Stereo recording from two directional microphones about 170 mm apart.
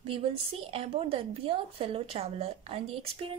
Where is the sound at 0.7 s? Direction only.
35° right (ahead or behind).